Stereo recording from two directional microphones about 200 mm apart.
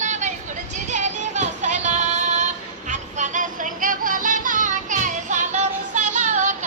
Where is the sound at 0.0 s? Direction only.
35° right (ahead or behind).